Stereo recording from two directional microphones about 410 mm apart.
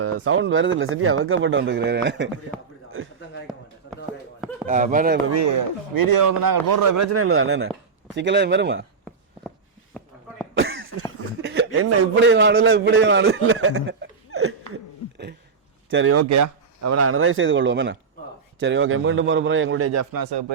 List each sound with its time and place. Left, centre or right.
0.0 s speech: right
4.6 s speech: centre
5.3 s speech: right
9.9 s a sound: centre
10.6 s cough: right
11.4 s a sound: right
12.3 s a man's voice: right
15.9 s speech: right
20.1 s speech: right